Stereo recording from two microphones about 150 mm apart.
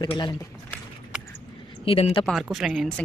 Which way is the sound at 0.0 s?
30° left (ahead or behind).